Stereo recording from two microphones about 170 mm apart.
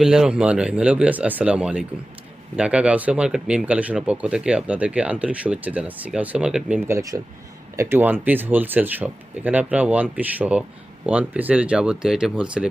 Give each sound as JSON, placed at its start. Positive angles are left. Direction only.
{"t": 0.0, "sound": "speech", "side_deg": -5}
{"t": 6.8, "sound": "speech", "side_deg": -20}